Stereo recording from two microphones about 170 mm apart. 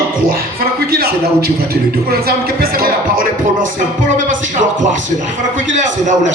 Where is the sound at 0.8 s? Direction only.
65° right (ahead or behind).